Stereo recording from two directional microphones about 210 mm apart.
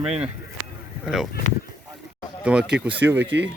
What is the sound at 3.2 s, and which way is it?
Speech, 55° right (ahead or behind).